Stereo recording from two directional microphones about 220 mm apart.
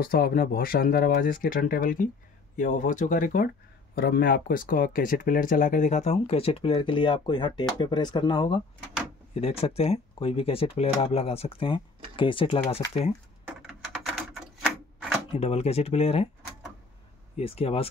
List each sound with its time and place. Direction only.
0.0 s speech: 40° left (ahead or behind); by 12.5 s 20° left (ahead or behind)
13.5 s typewriter: 5° right (ahead or behind)
15.3 s speech: 30° left (ahead or behind)
17.4 s speech: 25° left (ahead or behind)